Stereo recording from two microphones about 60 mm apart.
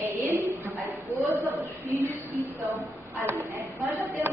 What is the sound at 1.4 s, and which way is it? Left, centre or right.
Speech, right.